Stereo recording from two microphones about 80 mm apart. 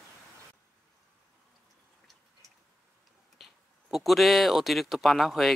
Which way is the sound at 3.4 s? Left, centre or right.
Centre.